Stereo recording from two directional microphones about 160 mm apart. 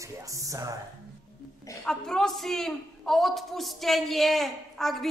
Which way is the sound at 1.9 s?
5° left (ahead or behind).